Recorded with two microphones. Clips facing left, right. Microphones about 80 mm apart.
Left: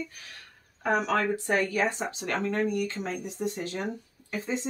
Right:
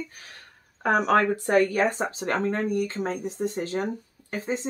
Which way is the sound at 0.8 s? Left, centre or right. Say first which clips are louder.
Right 5 dB; right.